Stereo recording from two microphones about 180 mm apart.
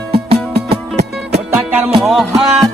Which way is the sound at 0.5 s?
60° right (ahead or behind).